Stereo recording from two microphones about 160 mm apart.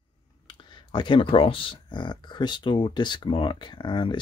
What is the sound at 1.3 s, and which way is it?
Speech, 35° left (ahead or behind).